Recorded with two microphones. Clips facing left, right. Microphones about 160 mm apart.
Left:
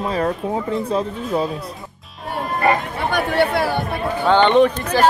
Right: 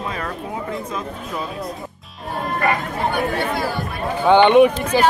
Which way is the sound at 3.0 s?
75° left (ahead or behind).